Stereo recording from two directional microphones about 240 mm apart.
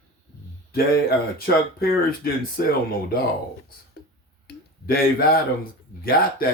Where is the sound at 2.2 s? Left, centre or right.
Left.